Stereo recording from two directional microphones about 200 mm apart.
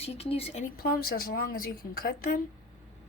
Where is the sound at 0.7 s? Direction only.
50° left (ahead or behind).